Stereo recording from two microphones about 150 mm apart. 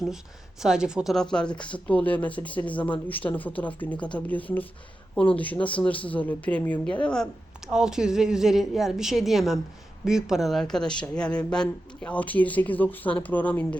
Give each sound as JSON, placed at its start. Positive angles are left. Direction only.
{"t": 0.6, "sound": "a woman's voice", "side_deg": -5}